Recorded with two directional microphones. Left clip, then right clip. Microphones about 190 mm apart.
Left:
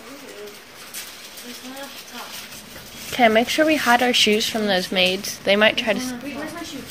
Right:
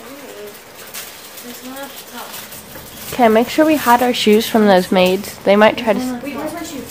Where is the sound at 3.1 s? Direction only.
5° right (ahead or behind).